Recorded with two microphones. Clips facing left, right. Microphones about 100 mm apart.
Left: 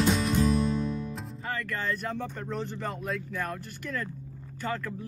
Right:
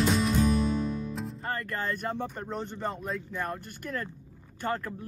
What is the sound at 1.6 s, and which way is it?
Speech, 40° right (ahead or behind).